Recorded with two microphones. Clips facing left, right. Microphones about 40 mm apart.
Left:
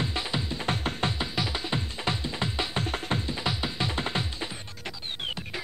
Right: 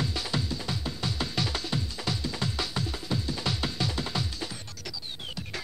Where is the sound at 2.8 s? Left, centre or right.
Left.